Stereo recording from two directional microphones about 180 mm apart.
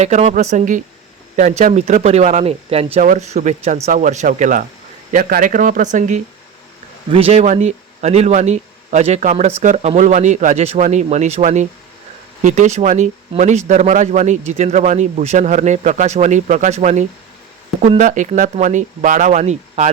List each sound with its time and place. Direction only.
0.0 s speech: 40° right (ahead or behind)